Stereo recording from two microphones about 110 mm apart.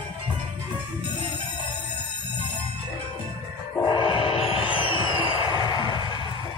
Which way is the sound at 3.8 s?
50° left (ahead or behind).